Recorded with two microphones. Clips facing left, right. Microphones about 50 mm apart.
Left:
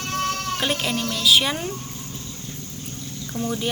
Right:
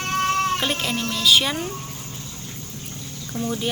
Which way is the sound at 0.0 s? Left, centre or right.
Right.